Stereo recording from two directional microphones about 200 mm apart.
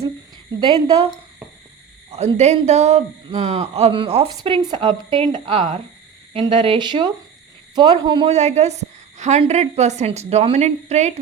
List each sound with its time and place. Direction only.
0.6 s a man's voice: 25° right (ahead or behind)
2.1 s a man's voice: 35° right (ahead or behind)